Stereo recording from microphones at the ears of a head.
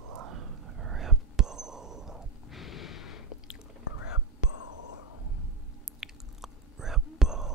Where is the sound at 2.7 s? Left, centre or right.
Left.